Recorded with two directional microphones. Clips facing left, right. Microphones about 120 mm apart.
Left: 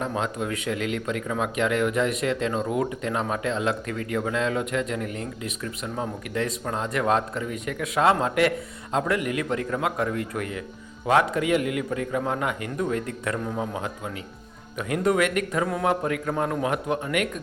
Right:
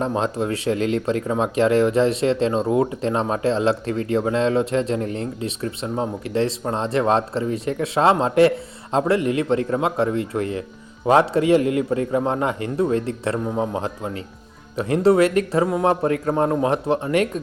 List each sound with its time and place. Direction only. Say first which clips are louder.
0.0 s a man's voice: right 5 dB; 30° right (ahead or behind)